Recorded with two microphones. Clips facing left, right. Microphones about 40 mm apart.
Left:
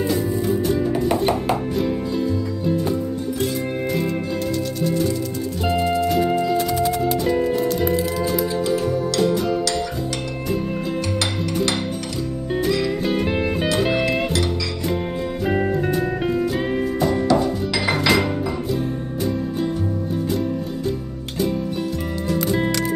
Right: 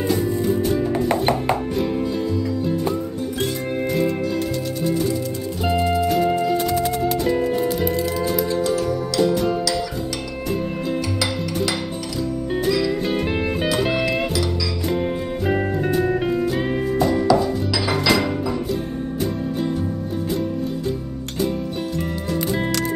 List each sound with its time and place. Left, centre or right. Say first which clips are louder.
0.1 s music: right 1 dB; centre
3.8 s music: right 4 dB; centre
5.7 s music: right 1 dB; centre
8.7 s music: left 1 dB; centre
9.2 s music: right 2 dB; centre
12.6 s music: even; centre
15.4 s music: left 1 dB; centre